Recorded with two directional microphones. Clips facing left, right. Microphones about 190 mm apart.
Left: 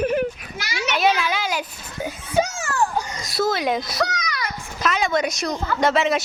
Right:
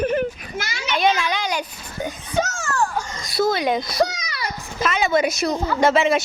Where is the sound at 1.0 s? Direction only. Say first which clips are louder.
Right 1 dB; 5° left (ahead or behind).